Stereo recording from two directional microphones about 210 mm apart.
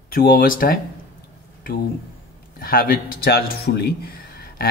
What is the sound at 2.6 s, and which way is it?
Speech, 45° left (ahead or behind).